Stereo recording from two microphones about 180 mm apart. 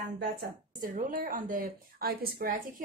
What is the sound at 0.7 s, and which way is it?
A woman's voice, 50° right (ahead or behind).